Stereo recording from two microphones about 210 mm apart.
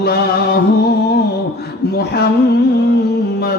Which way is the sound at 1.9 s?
45° left (ahead or behind).